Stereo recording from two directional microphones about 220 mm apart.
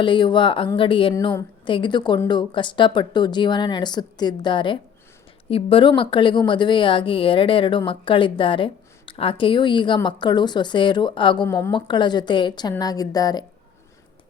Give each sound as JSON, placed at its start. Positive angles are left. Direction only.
{"t": 0.0, "sound": "a woman's voice", "side_deg": 20}